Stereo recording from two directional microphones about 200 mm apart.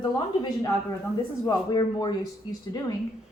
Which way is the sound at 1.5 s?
20° left (ahead or behind).